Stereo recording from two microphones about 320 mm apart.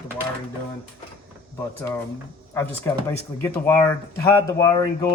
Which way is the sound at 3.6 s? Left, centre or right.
Centre.